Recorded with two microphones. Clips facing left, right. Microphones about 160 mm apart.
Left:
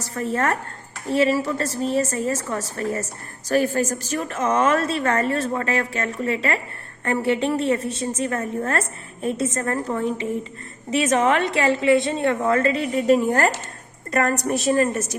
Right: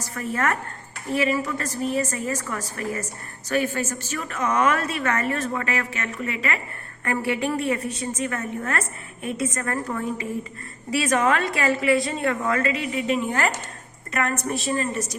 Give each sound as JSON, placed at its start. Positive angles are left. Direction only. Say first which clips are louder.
{"t": 0.1, "sound": "a woman's voice", "louder": "left 3 dB", "side_deg": 30}